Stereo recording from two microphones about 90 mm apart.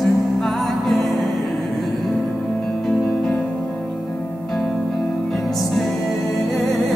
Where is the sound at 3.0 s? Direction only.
15° left (ahead or behind).